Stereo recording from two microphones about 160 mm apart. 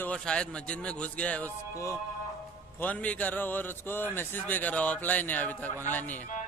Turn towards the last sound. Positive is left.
turn(degrees=10)  # may be behind; listen again after turning